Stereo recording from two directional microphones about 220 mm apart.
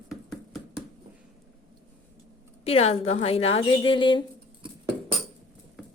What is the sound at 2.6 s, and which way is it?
A woman's voice, 25° left (ahead or behind).